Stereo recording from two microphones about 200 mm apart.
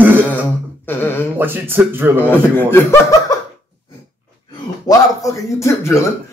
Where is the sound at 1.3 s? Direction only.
10° right (ahead or behind).